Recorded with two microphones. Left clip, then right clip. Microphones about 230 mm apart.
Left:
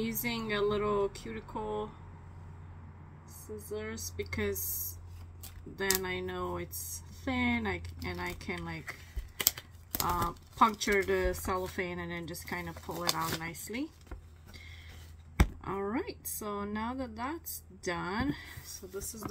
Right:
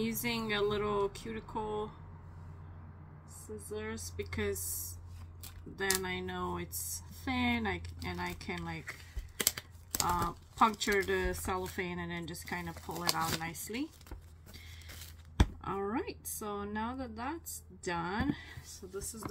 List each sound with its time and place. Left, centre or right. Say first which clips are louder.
0.0 s speech: even; centre
3.4 s speech: left 2 dB; centre
15.6 s speech: left 1 dB; centre